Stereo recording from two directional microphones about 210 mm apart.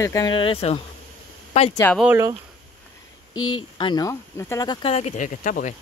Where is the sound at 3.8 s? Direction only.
20° left (ahead or behind); by 5.7 s 40° left (ahead or behind).